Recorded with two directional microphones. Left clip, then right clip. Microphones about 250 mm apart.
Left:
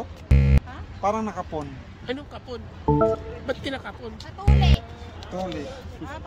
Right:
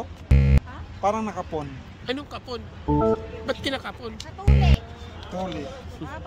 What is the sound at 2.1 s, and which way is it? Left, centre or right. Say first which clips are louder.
Speech: right 2 dB; right.